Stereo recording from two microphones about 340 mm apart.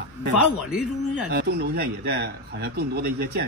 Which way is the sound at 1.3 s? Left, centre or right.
Right.